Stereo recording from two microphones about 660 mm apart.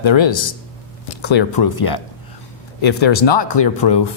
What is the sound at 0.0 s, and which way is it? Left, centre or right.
A man's voice, left.